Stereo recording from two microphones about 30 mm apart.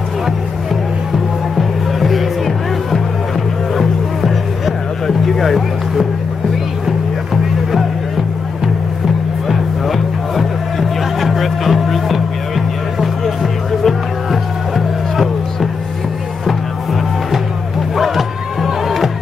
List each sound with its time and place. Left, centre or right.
1.1 s music: centre
9.5 s music: centre
17.9 s crowd: centre